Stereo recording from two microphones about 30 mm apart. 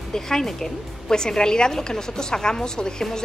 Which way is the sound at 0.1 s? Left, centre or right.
Centre.